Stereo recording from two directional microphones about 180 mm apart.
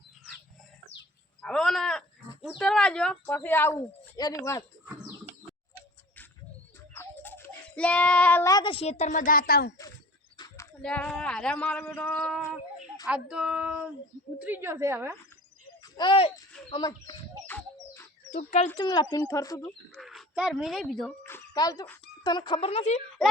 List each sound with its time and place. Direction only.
1.4 s a sound: 5° left (ahead or behind)
6.9 s speech: 10° left (ahead or behind); by 9.7 s 60° left (ahead or behind)
10.3 s a sound: 20° left (ahead or behind)
10.8 s speech: 5° left (ahead or behind)
13.1 s a woman's voice: 5° right (ahead or behind)
15.8 s speech: 25° left (ahead or behind)
16.5 s bird: 5° left (ahead or behind)
18.8 s speech: 25° left (ahead or behind)
19.9 s speech: centre (ahead or behind)
21.2 s a sound: 15° left (ahead or behind)
22.2 s speech: 25° left (ahead or behind)